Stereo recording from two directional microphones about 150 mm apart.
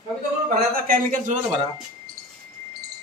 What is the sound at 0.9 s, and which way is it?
Speech, 65° right (ahead or behind).